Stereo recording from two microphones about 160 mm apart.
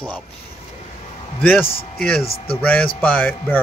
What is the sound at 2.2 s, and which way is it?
Speech, 35° left (ahead or behind).